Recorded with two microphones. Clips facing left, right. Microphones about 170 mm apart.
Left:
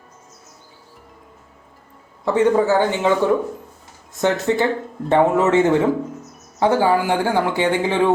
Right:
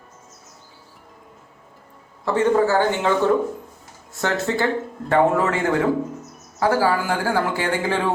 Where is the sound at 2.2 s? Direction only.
15° left (ahead or behind).